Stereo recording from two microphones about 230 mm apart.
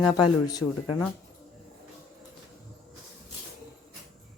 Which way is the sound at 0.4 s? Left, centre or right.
Centre.